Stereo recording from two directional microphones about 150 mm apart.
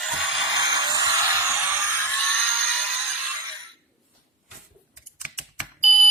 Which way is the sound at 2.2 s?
5° left (ahead or behind).